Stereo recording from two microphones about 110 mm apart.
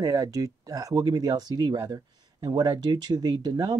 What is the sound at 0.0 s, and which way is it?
Speech, 35° right (ahead or behind).